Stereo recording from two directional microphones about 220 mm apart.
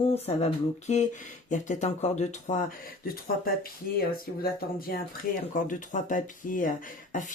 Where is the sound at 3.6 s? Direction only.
40° left (ahead or behind).